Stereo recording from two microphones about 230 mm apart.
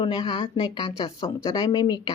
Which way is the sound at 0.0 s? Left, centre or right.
Left.